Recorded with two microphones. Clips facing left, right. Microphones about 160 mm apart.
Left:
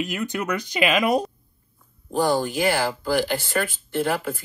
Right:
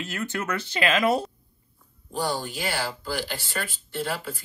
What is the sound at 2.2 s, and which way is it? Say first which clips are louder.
Speech: left 8 dB; 50° left (ahead or behind).